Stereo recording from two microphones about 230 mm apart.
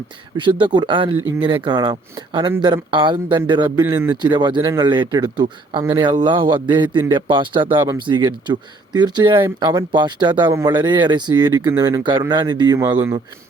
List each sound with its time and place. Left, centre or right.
0.3 s speech: right